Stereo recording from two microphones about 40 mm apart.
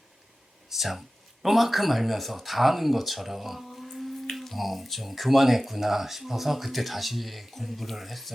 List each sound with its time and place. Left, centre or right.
0.7 s speech: centre